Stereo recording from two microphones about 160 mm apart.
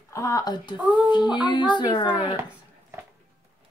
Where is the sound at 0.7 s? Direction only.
5° right (ahead or behind).